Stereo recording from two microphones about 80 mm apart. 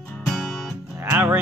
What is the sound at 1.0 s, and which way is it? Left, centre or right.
Music, right.